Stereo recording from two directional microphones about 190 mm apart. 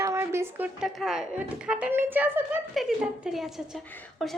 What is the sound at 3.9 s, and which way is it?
Speech, 10° left (ahead or behind).